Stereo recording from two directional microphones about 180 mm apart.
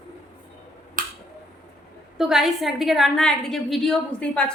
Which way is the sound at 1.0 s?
50° right (ahead or behind).